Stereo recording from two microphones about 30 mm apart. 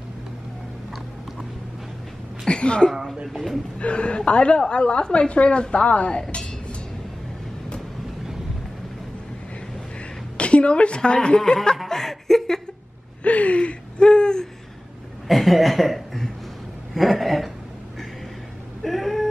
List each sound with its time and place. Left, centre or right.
2.4 s a sound: left
3.8 s a woman's voice: left
6.3 s music: left
10.3 s a woman's voice: left
11.3 s speech: left
11.9 s chuckle: centre
13.2 s a sound: left
15.2 s chuckle: centre
16.9 s a sound: centre
18.9 s cat: centre